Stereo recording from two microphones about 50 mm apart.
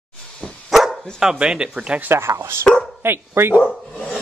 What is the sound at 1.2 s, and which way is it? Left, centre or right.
Speech, centre.